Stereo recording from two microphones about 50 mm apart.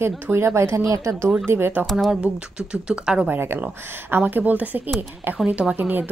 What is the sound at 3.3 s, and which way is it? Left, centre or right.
Speech, right.